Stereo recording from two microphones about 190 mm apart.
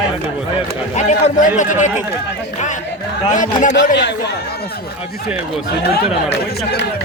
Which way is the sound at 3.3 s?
40° left (ahead or behind).